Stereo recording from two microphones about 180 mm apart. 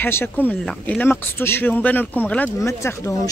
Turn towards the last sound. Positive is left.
turn(degrees=15)  # may be behind; listen again after turning